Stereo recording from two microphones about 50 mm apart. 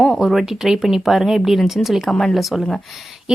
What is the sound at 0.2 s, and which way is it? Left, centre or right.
Speech, centre.